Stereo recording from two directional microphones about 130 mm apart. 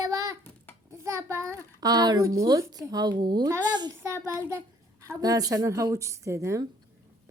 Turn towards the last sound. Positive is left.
turn(degrees=-20)  # may be behind; listen again after turning